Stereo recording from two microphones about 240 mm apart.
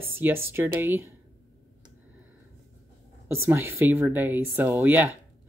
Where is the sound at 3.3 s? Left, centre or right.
Centre.